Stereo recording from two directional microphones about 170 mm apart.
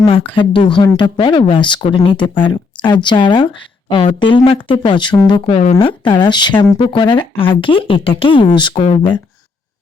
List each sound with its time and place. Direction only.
0.0 s speech: 30° left (ahead or behind)